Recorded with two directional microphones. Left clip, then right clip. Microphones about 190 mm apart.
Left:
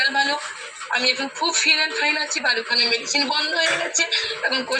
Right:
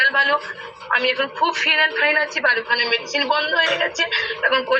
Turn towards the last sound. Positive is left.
turn(degrees=50)  # may be behind; listen again after turning